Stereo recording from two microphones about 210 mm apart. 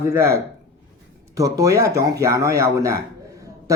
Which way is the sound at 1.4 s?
15° right (ahead or behind).